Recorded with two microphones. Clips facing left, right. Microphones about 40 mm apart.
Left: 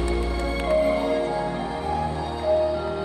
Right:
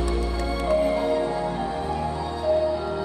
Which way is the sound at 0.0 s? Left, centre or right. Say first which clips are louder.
Left 1 dB; left.